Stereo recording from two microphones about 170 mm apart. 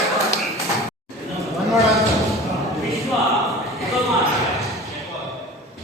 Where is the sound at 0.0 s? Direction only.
Centre (ahead or behind).